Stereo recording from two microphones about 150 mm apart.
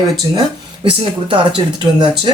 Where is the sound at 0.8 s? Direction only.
35° right (ahead or behind).